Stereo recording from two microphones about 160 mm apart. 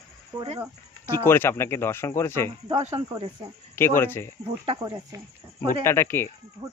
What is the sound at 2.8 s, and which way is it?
Speech, 40° right (ahead or behind).